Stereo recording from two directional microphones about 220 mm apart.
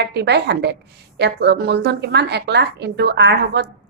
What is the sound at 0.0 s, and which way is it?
A woman's voice, 50° right (ahead or behind).